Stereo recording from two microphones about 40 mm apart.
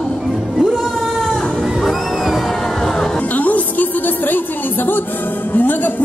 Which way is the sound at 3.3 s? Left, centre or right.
Left.